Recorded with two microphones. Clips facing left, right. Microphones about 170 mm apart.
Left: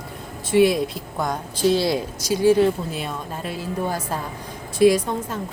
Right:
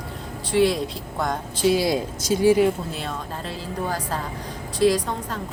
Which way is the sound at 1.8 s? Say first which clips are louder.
Even; 20° right (ahead or behind).